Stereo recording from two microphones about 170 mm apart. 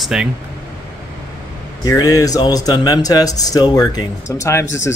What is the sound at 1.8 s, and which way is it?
Speech, 20° left (ahead or behind).